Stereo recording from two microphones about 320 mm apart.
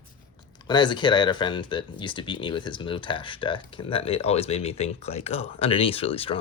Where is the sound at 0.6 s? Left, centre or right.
Centre.